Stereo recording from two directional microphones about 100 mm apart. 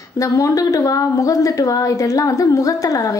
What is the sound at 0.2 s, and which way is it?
Speech, 35° left (ahead or behind).